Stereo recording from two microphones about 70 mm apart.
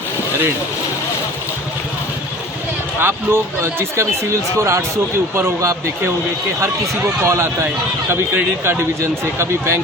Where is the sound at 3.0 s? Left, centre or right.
Right.